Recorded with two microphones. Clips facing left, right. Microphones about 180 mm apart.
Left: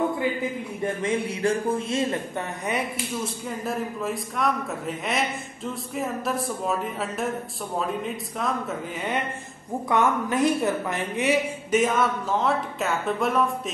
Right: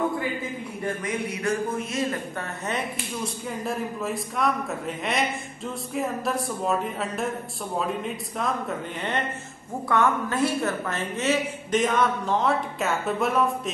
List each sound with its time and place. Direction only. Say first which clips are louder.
0.8 s a man's voice: left 3 dB; 25° left (ahead or behind)
3.4 s speech: right 1 dB; centre (ahead or behind)
9.8 s a woman's voice: even; 15° left (ahead or behind); by 13.5 s centre (ahead or behind)